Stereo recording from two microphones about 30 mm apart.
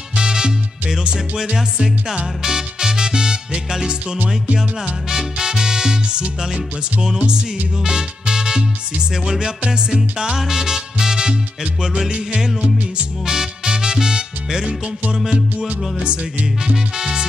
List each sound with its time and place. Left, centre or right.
0.1 s music: right
1.3 s music: centre
7.0 s music: right
13.2 s music: right
15.1 s music: centre
16.9 s music: right